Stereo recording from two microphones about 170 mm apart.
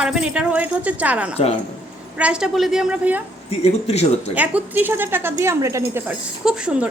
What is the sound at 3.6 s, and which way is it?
Speech, 40° left (ahead or behind).